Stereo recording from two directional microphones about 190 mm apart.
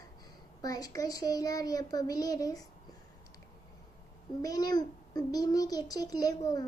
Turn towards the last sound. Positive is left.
turn(degrees=20)  # may be behind; listen again after turning